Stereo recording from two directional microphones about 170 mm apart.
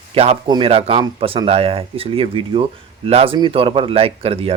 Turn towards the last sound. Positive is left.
turn(degrees=-35)  # may be behind; listen again after turning